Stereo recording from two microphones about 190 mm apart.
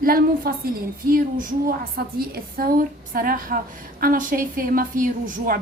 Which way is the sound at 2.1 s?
50° right (ahead or behind).